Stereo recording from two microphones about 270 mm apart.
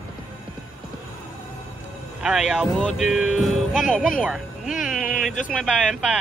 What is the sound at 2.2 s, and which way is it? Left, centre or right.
Speech, centre.